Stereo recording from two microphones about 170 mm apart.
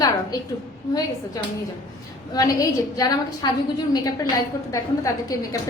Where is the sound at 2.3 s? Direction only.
20° left (ahead or behind).